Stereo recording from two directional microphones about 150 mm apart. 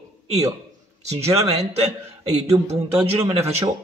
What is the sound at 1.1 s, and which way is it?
Speech, 45° right (ahead or behind).